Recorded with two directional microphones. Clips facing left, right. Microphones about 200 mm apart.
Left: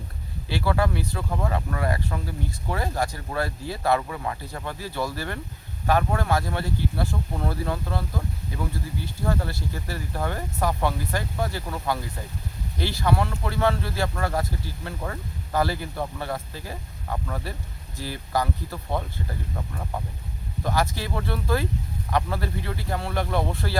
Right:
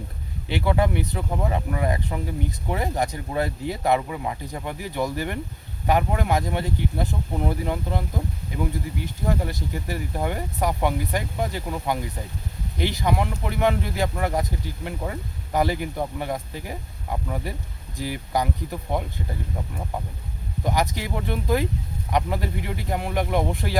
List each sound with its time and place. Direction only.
0.4 s speech: 20° right (ahead or behind)